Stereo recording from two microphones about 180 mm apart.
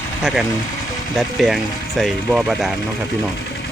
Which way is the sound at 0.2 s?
5° right (ahead or behind).